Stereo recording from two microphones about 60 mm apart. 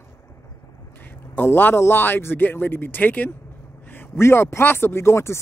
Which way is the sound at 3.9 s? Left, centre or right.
Left.